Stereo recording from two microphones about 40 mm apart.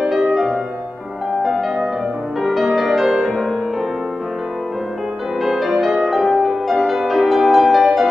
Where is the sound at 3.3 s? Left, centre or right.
Centre.